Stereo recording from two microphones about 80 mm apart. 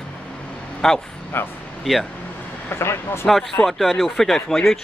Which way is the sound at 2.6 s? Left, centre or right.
Left.